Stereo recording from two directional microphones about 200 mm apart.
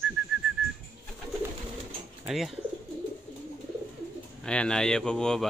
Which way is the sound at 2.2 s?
5° right (ahead or behind).